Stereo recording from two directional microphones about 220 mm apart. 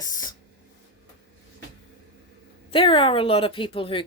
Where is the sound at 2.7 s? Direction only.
25° left (ahead or behind).